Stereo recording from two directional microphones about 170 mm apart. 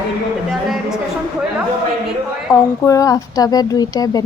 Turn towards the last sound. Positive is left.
turn(degrees=20)  # may be behind; listen again after turning